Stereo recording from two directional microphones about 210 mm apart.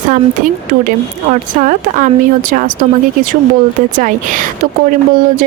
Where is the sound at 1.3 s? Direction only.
35° right (ahead or behind).